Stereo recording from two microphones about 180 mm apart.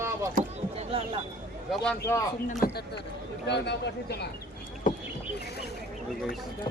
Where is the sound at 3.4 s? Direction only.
70° left (ahead or behind).